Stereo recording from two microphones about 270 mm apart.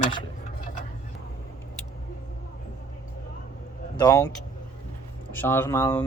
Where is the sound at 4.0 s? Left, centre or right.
Centre.